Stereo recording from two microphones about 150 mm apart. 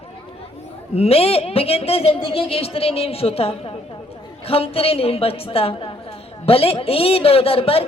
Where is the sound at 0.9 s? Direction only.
40° left (ahead or behind).